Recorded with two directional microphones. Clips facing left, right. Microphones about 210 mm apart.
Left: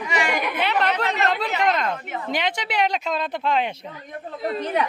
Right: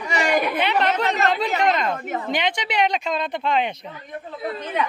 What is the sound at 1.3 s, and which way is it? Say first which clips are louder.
Speech: right 1 dB; centre (ahead or behind).